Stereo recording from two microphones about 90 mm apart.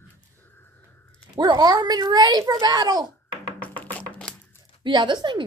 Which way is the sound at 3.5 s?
20° left (ahead or behind).